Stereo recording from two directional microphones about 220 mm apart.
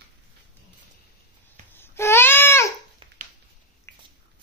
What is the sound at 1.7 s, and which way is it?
Babbling, 10° left (ahead or behind).